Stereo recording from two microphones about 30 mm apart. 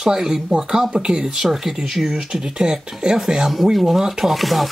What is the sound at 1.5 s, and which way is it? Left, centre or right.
Speech, centre.